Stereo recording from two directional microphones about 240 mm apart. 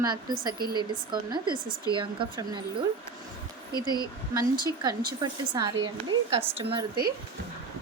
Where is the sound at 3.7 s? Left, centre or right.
Centre.